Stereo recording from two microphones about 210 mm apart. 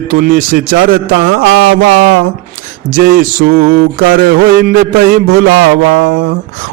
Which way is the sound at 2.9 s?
40° right (ahead or behind).